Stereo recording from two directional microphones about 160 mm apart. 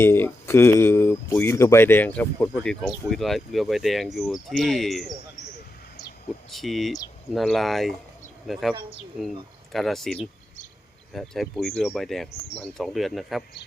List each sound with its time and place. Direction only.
0.0 s speech: 15° left (ahead or behind); by 5.1 s centre (ahead or behind)
6.5 s speech: centre (ahead or behind)
9.7 s speech: centre (ahead or behind)